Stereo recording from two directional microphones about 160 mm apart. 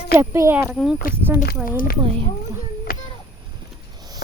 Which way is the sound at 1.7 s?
60° left (ahead or behind).